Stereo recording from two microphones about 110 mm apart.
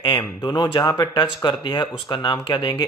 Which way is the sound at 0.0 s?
45° left (ahead or behind).